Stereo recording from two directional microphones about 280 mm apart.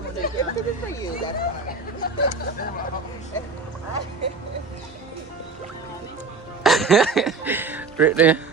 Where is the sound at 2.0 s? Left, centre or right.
Left.